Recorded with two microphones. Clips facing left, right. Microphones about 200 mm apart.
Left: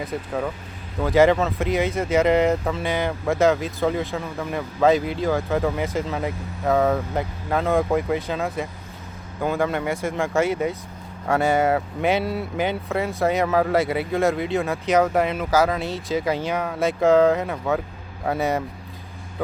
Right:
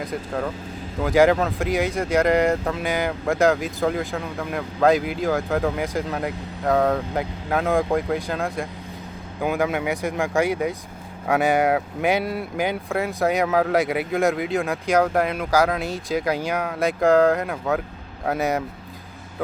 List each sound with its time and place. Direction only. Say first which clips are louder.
0.0 s speech: even; 5° left (ahead or behind)
9.4 s speech: even; 5° right (ahead or behind)
11.3 s speech: even; 15° right (ahead or behind)
12.9 s speech: even; centre (ahead or behind)